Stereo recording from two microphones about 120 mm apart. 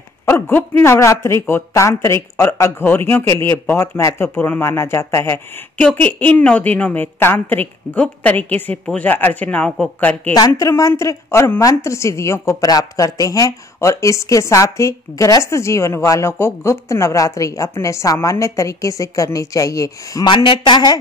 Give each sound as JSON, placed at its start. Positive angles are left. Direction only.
{"t": 0.3, "sound": "a woman's voice", "side_deg": 15}
{"t": 5.8, "sound": "a woman's voice", "side_deg": 10}
{"t": 10.3, "sound": "a woman's voice", "side_deg": 30}
{"t": 20.2, "sound": "a man's voice", "side_deg": 45}